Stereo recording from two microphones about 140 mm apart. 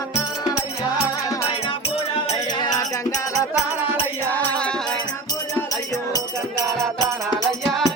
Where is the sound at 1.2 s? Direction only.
25° left (ahead or behind).